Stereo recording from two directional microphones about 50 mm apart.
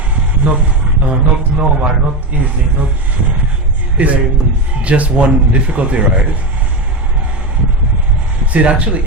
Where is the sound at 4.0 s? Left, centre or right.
Right.